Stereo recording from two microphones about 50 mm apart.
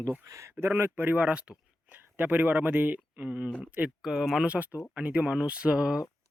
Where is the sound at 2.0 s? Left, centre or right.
Right.